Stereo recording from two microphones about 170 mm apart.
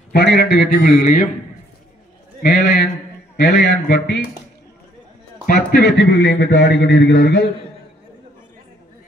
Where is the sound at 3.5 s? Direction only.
80° left.